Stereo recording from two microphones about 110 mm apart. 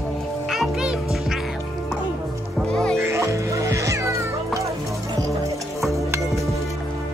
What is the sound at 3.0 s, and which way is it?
Music, 25° right (ahead or behind).